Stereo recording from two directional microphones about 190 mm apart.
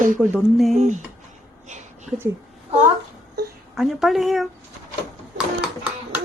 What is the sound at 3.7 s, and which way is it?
Speech, centre (ahead or behind).